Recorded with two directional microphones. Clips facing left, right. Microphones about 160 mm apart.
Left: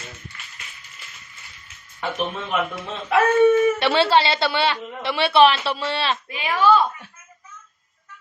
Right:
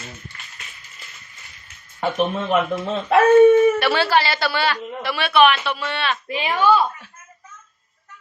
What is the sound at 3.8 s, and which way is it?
A woman's voice, 25° left (ahead or behind).